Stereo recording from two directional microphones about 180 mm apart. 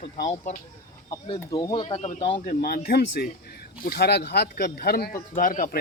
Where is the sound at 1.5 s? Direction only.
20° left (ahead or behind).